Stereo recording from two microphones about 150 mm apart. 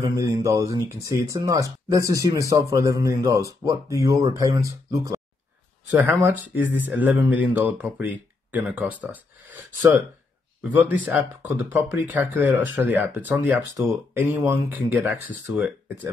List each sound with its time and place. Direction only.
0.0 s speech: 20° right (ahead or behind)
5.9 s speech: 10° right (ahead or behind)